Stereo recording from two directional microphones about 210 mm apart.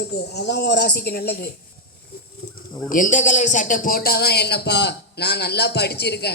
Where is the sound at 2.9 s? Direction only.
40° left (ahead or behind).